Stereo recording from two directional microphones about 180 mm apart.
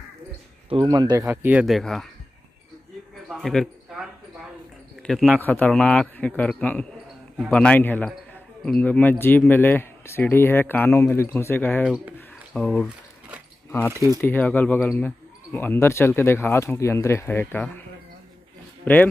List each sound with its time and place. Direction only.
0.7 s speech: 25° right (ahead or behind); by 2.0 s centre (ahead or behind)
3.3 s a man's voice: centre (ahead or behind)
13.9 s speech: 20° right (ahead or behind)
14.2 s speech: 10° left (ahead or behind)
18.9 s speech: 10° left (ahead or behind)